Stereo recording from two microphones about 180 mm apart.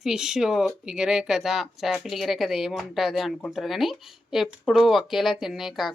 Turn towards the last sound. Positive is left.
turn(degrees=0)  # may be behind; listen again after turning